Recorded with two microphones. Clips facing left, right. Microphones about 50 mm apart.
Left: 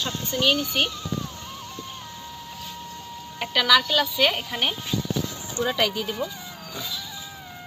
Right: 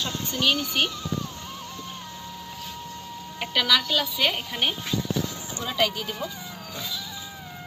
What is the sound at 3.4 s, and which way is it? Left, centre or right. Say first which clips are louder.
Speech: left 3 dB; centre.